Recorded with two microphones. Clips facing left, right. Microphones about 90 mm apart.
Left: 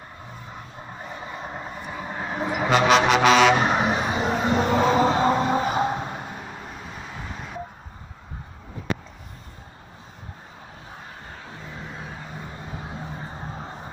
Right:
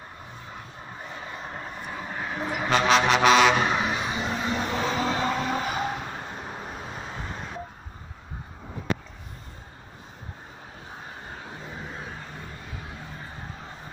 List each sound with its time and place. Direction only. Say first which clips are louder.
1.5 s vehicle: left 2 dB; 15° left (ahead or behind)
2.7 s music: left 3 dB; 5° left (ahead or behind)
3.6 s vehicle: left 4 dB; 30° left (ahead or behind)
6.4 s vehicle: right 1 dB; 10° right (ahead or behind)
12.6 s vehicle: left 5 dB; 25° left (ahead or behind)